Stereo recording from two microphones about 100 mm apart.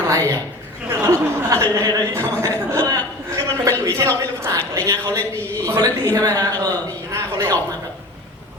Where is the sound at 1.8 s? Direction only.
30° right (ahead or behind).